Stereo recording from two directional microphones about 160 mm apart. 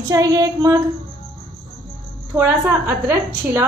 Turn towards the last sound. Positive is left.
turn(degrees=-15)  # may be behind; listen again after turning